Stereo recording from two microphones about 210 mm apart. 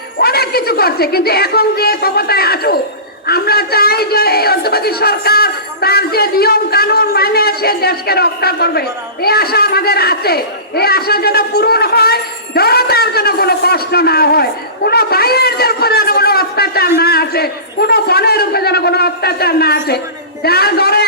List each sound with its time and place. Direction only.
0.2 s a man's voice: 50° left (ahead or behind)